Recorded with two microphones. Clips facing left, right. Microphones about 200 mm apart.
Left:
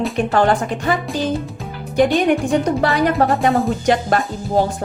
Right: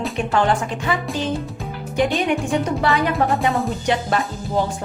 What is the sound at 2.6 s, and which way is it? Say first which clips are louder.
Speech: left 3 dB; 35° left (ahead or behind).